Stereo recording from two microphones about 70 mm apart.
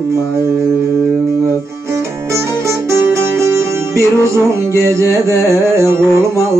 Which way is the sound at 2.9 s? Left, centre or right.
Right.